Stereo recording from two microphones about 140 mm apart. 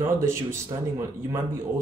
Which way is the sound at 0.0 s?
20° right (ahead or behind).